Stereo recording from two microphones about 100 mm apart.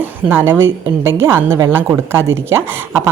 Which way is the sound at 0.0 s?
20° right (ahead or behind).